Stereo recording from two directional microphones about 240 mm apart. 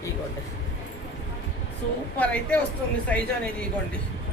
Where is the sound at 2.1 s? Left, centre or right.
Centre.